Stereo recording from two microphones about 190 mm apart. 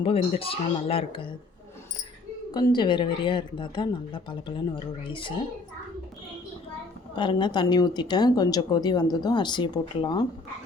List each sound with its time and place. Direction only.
0.0 s a woman's voice: 30° left (ahead or behind)
2.5 s a woman's voice: 20° left (ahead or behind)
7.2 s a woman's voice: 25° left (ahead or behind)